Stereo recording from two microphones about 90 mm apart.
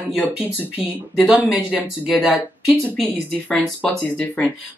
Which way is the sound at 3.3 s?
10° left (ahead or behind).